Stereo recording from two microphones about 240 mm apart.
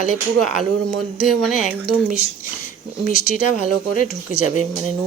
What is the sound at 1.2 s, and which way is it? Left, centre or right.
Speech, centre.